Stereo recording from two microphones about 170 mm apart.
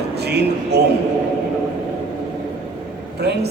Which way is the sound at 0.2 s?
75° right (ahead or behind).